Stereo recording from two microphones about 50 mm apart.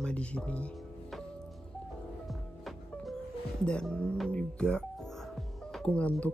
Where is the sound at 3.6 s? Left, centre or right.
Centre.